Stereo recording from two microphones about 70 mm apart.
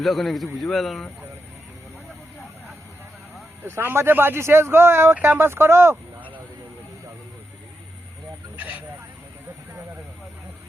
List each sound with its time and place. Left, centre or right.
0.0 s a man's voice: centre
3.6 s speech: right
8.5 s a sound: right